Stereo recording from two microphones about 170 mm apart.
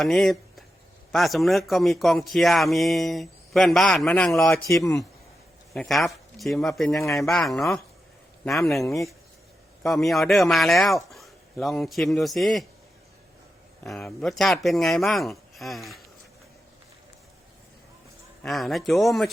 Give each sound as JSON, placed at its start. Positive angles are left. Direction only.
{"t": 0.0, "sound": "speech", "side_deg": 0}
{"t": 4.7, "sound": "speech", "side_deg": 20}
{"t": 5.7, "sound": "speech", "side_deg": 0}
{"t": 13.8, "sound": "speech", "side_deg": 0}
{"t": 18.4, "sound": "speech", "side_deg": 0}